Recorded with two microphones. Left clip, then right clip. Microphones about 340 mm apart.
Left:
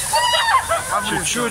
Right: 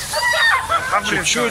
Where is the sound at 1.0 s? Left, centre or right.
Centre.